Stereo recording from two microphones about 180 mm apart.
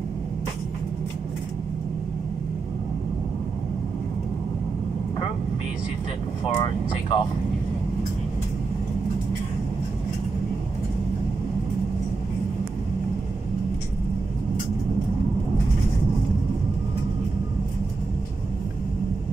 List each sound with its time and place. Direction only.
6.5 s speech: 30° left (ahead or behind)